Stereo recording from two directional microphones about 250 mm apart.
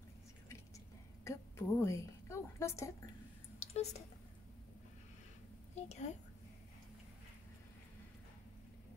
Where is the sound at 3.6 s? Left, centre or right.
Left.